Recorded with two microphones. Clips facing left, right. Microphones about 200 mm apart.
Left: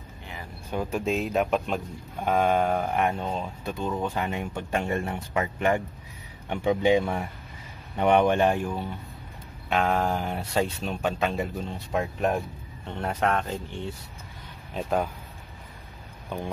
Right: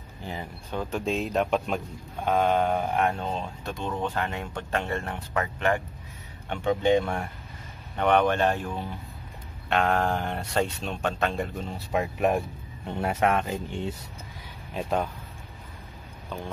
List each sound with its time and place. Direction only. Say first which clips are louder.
0.2 s a sound: right 6 dB; 30° right (ahead or behind)
0.7 s speech: left 2 dB; 10° left (ahead or behind)
9.7 s speech: even; centre (ahead or behind)
14.7 s speech: left 1 dB; centre (ahead or behind)